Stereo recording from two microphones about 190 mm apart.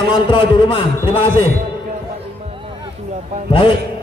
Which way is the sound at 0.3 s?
25° left (ahead or behind).